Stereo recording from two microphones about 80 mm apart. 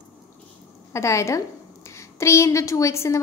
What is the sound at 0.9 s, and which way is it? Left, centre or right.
A woman's voice, left.